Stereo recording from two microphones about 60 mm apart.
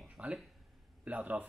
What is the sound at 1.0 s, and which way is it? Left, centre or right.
Speech, right.